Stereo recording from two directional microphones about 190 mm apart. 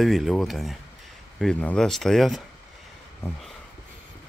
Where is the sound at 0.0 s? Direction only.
Centre (ahead or behind).